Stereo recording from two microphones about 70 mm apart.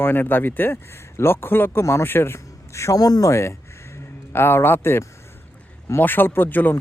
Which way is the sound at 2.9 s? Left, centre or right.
Left.